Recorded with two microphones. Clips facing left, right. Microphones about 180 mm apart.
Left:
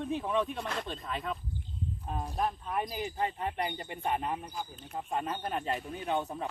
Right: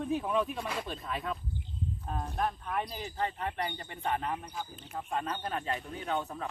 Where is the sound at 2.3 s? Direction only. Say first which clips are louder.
Left 1 dB; 15° left (ahead or behind).